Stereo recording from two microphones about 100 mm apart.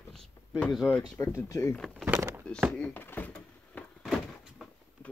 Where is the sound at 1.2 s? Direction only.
30° left (ahead or behind).